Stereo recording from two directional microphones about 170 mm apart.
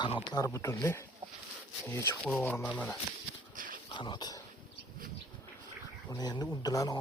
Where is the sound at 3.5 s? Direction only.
55° right (ahead or behind).